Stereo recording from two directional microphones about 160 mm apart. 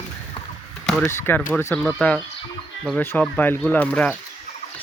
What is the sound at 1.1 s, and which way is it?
Speech, 15° left (ahead or behind).